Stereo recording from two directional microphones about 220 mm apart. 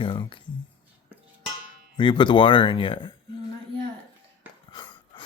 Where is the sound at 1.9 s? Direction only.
20° left (ahead or behind).